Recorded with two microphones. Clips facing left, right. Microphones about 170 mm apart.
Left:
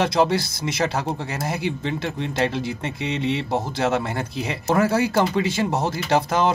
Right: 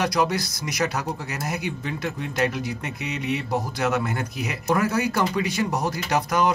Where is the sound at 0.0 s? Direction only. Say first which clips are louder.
Left 3 dB; 25° left (ahead or behind).